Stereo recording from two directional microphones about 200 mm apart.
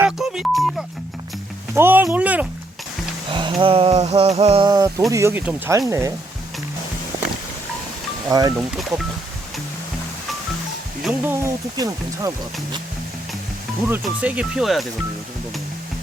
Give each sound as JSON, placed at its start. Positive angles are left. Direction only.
{"t": 0.0, "sound": "music", "side_deg": 0}
{"t": 1.7, "sound": "speech", "side_deg": -10}
{"t": 3.3, "sound": "speech", "side_deg": -25}
{"t": 8.3, "sound": "speech", "side_deg": -15}
{"t": 11.0, "sound": "speech", "side_deg": -10}
{"t": 13.8, "sound": "speech", "side_deg": -10}